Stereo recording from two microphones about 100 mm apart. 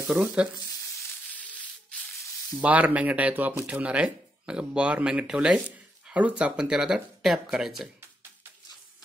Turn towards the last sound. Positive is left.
turn(degrees=-5)  # may be behind; listen again after turning